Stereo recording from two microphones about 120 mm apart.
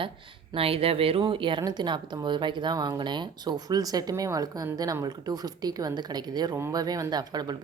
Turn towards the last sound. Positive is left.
turn(degrees=-35)  # may be behind; listen again after turning